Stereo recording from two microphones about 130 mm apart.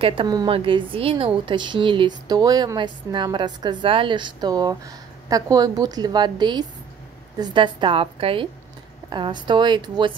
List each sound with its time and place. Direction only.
0.0 s a woman's voice: 40° right (ahead or behind)